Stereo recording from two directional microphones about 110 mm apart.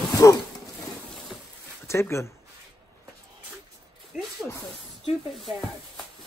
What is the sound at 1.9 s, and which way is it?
Speech, 25° left (ahead or behind).